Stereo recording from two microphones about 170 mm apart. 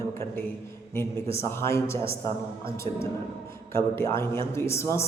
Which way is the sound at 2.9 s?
40° right (ahead or behind).